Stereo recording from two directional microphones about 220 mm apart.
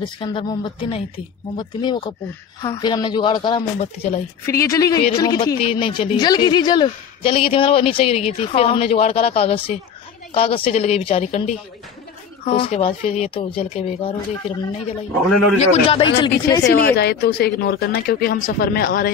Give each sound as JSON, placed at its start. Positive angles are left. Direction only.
{"t": 0.0, "sound": "a woman's voice", "side_deg": 20}
{"t": 4.5, "sound": "a woman's voice", "side_deg": 15}
{"t": 16.6, "sound": "a woman's voice", "side_deg": 45}